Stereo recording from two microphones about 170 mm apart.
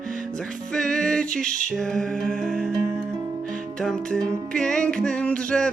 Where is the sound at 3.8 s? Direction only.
5° left (ahead or behind).